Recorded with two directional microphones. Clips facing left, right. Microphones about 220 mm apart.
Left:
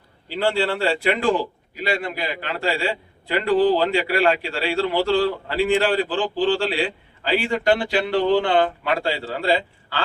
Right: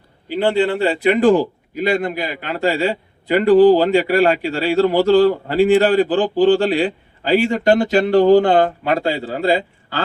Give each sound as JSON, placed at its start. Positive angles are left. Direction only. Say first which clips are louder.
{"t": 0.3, "sound": "speech", "louder": "right 5 dB", "side_deg": -20}
{"t": 1.1, "sound": "a man's voice", "louder": "right 8 dB", "side_deg": -45}